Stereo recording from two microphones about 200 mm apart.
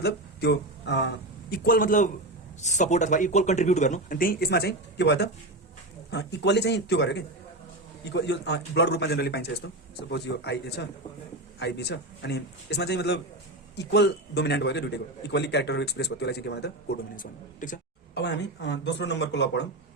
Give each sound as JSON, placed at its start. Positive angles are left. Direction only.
{"t": 0.0, "sound": "a man's voice", "side_deg": 55}
{"t": 17.2, "sound": "speech", "side_deg": 40}
{"t": 18.1, "sound": "a man's voice", "side_deg": 60}